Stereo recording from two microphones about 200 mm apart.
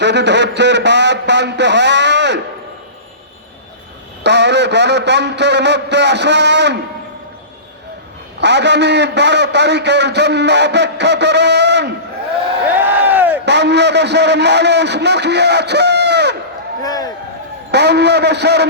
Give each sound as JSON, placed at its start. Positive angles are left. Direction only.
{"t": 0.0, "sound": "a man's voice", "side_deg": -60}
{"t": 4.2, "sound": "a man's voice", "side_deg": -60}
{"t": 8.4, "sound": "a man's voice", "side_deg": -60}
{"t": 12.8, "sound": "a sound", "side_deg": -10}
{"t": 13.4, "sound": "a man's voice", "side_deg": -60}
{"t": 16.8, "sound": "a sound", "side_deg": 20}
{"t": 17.7, "sound": "a man's voice", "side_deg": -55}